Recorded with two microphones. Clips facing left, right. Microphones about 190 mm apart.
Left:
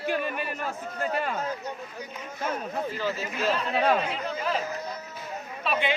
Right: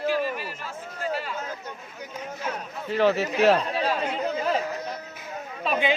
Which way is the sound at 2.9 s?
70° right (ahead or behind).